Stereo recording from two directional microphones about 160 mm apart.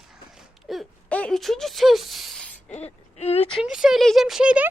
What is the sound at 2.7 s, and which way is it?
Speech, 40° left (ahead or behind).